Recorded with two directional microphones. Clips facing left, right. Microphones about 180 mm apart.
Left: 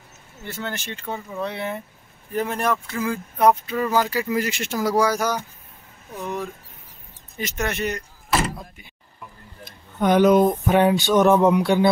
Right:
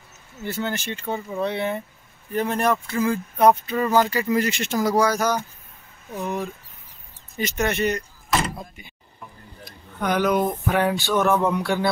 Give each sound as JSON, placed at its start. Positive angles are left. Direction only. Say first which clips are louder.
{"t": 0.4, "sound": "speech", "louder": "right 4 dB", "side_deg": -5}
{"t": 6.1, "sound": "speech", "louder": "right 1 dB", "side_deg": -5}
{"t": 9.7, "sound": "a sound", "louder": "left 5 dB", "side_deg": 25}